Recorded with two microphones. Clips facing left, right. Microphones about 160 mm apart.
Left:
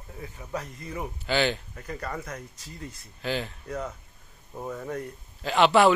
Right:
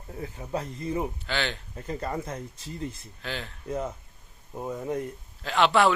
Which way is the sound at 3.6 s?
25° right (ahead or behind).